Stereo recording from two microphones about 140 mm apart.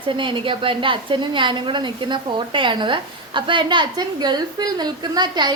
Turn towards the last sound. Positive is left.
turn(degrees=-30)  # may be behind; listen again after turning